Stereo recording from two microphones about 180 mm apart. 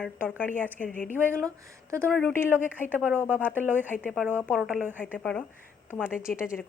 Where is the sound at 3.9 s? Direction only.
5° left (ahead or behind).